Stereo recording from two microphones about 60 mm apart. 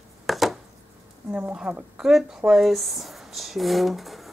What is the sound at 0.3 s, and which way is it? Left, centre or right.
Chopping, centre.